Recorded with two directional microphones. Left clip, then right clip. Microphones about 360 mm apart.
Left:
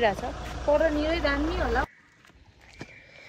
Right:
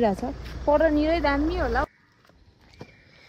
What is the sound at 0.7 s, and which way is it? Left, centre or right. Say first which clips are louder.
Speech: right 3 dB; centre.